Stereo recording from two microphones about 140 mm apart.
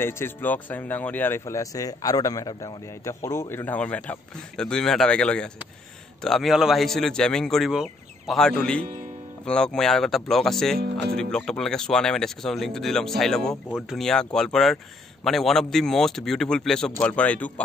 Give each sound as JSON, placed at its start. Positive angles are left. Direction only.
{"t": 0.0, "sound": "speech", "side_deg": 15}